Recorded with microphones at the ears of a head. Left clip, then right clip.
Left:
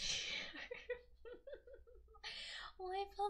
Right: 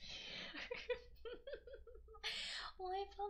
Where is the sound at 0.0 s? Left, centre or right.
Left.